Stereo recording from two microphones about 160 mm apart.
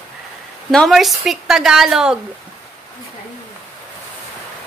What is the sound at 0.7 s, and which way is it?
Speech, centre (ahead or behind).